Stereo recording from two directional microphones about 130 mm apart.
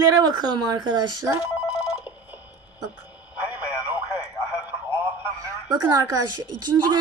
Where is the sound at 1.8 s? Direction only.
10° right (ahead or behind).